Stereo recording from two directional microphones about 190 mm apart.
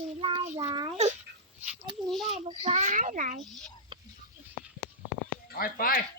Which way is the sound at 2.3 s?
30° right (ahead or behind).